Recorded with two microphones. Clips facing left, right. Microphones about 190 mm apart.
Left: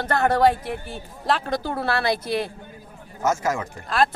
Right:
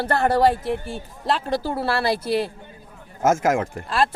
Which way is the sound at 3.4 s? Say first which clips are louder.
Right 5 dB; 50° right (ahead or behind).